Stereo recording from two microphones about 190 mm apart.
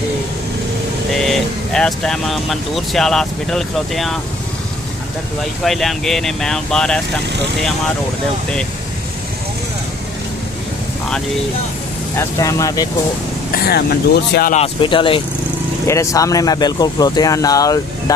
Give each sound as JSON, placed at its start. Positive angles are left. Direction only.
{"t": 1.1, "sound": "speech", "side_deg": 0}
{"t": 5.4, "sound": "speech", "side_deg": 0}
{"t": 12.2, "sound": "speech", "side_deg": 15}
{"t": 13.5, "sound": "speech", "side_deg": 55}
{"t": 14.5, "sound": "speech", "side_deg": 30}
{"t": 15.9, "sound": "speech", "side_deg": 15}